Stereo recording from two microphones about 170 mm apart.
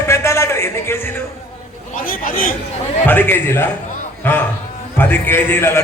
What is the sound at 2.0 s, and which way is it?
Speech, 55° left (ahead or behind).